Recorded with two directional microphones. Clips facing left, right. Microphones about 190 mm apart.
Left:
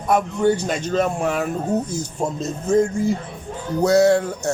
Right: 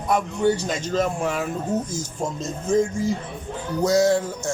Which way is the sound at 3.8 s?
65° left (ahead or behind).